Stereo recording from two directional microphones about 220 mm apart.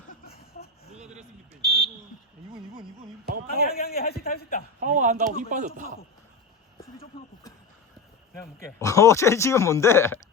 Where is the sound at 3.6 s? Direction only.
45° left (ahead or behind).